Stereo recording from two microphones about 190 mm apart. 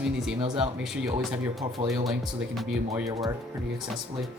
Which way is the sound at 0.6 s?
5° right (ahead or behind).